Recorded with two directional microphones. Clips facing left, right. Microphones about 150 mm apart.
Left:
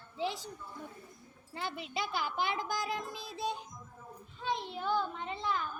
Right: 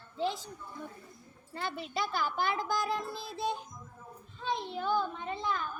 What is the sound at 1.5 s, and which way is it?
A child's voice, 15° left (ahead or behind).